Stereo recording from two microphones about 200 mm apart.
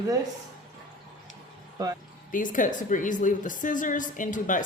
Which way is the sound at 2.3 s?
40° left (ahead or behind).